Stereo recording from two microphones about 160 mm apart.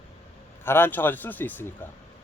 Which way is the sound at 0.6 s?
15° left (ahead or behind).